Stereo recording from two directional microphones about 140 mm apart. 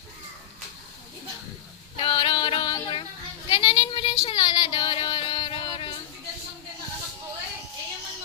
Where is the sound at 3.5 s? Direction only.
35° left (ahead or behind).